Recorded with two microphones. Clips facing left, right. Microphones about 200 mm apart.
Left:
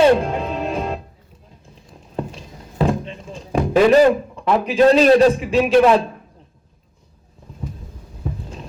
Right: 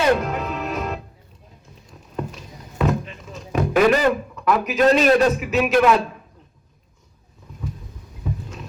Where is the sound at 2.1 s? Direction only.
30° left (ahead or behind).